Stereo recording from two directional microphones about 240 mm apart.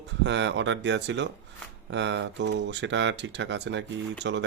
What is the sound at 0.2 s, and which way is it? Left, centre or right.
Speech, right.